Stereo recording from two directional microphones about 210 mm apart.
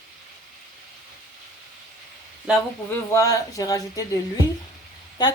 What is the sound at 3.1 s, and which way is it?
Speech, 15° left (ahead or behind).